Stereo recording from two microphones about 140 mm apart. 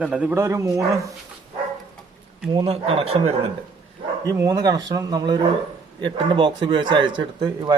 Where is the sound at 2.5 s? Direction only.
45° right (ahead or behind).